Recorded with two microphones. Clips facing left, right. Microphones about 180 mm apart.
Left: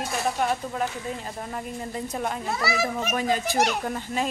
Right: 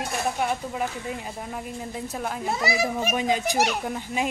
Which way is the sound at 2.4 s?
20° right (ahead or behind).